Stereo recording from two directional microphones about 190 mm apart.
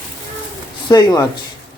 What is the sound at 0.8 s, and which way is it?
Speech, 20° left (ahead or behind).